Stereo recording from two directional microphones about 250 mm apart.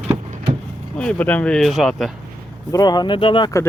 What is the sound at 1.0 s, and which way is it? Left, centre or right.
Speech, centre.